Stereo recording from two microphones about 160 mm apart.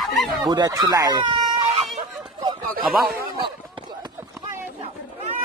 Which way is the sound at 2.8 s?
10° right (ahead or behind).